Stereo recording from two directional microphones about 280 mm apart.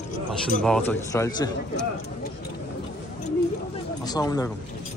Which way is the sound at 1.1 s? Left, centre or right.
Centre.